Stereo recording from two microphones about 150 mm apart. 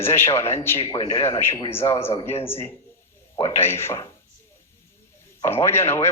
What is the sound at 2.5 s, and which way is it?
Speech, 15° left (ahead or behind).